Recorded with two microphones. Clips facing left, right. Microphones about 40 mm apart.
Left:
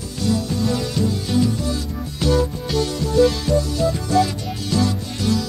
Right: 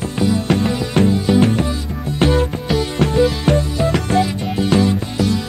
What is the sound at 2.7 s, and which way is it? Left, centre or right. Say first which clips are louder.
Music: right 3 dB; centre.